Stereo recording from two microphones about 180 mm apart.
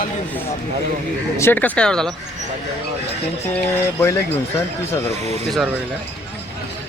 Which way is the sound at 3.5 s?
10° left (ahead or behind).